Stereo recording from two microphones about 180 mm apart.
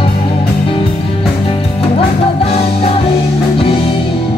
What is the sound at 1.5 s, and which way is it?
Music, 35° left (ahead or behind).